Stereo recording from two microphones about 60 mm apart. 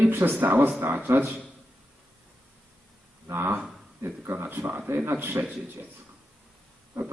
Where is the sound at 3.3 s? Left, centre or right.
Right.